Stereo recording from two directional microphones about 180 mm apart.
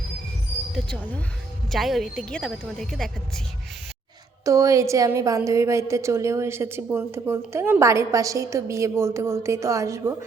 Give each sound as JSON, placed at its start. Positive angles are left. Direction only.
{"t": 0.7, "sound": "a woman's voice", "side_deg": 5}
{"t": 4.4, "sound": "a woman's voice", "side_deg": -20}